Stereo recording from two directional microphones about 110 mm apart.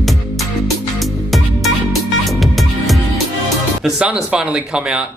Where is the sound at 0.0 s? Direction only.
Centre (ahead or behind).